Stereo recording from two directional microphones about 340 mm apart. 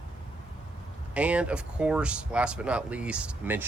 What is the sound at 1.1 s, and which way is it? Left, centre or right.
Speech, centre.